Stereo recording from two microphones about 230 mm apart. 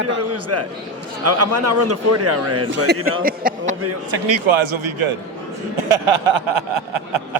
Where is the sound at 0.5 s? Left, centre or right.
Right.